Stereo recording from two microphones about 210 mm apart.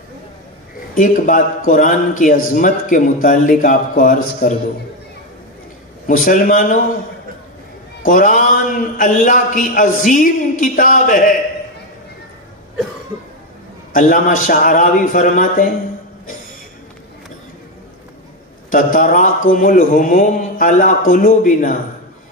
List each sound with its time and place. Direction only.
0.9 s a man's voice: 40° left (ahead or behind)
6.0 s a man's voice: 40° left (ahead or behind)
8.0 s a man's voice: 40° left (ahead or behind)
13.9 s a man's voice: 40° left (ahead or behind)
18.7 s a man's voice: 40° left (ahead or behind)